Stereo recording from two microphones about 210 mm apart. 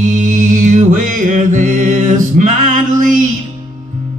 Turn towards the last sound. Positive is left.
turn(degrees=-40)  # may be behind; listen again after turning